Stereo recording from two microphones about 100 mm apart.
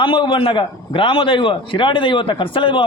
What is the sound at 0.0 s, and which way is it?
A man's voice, 55° left (ahead or behind).